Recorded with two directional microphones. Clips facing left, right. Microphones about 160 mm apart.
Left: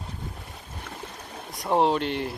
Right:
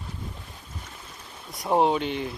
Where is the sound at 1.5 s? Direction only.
Centre (ahead or behind).